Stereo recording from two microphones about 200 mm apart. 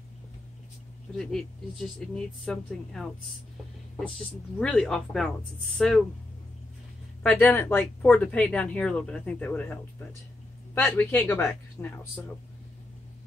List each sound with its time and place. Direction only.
1.1 s speech: centre (ahead or behind)
4.6 s speech: 5° left (ahead or behind)
7.2 s speech: 10° left (ahead or behind)
10.7 s speech: 10° left (ahead or behind)